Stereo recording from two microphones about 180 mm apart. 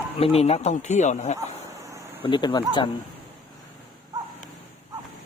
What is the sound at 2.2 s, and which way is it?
Speech, 25° left (ahead or behind).